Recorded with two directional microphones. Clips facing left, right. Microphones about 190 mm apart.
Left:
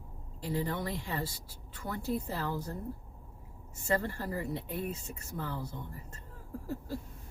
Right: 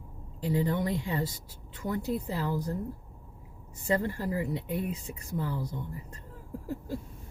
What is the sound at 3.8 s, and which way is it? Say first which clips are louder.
Speech: right 3 dB; 15° right (ahead or behind).